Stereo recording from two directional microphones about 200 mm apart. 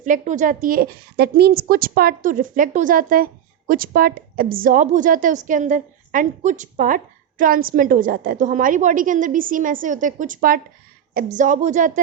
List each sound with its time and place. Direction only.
0.0 s a woman's voice: 40° right (ahead or behind)